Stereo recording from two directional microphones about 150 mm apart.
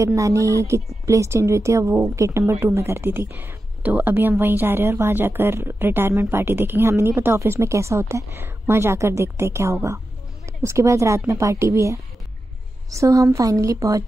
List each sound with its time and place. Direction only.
0.0 s a woman's voice: 20° right (ahead or behind)